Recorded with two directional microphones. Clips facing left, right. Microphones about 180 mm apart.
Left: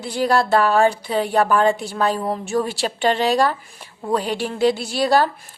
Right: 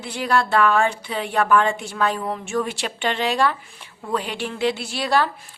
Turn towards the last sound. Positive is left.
turn(degrees=40)  # may be behind; listen again after turning